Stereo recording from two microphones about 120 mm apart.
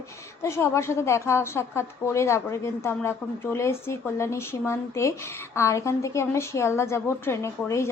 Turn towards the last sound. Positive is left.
turn(degrees=25)  # may be behind; listen again after turning